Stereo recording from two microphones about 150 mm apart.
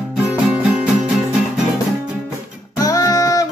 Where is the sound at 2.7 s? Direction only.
20° left (ahead or behind).